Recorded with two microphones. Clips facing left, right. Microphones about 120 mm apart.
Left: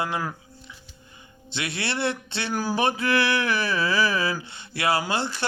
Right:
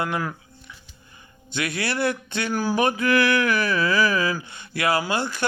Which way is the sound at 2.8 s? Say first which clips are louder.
Right 3 dB; 30° left (ahead or behind).